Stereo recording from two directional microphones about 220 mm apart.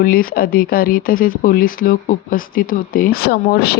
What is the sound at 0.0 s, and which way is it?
Speech, 40° left (ahead or behind).